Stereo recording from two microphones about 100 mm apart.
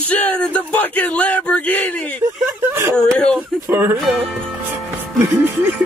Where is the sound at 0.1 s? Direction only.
10° left (ahead or behind).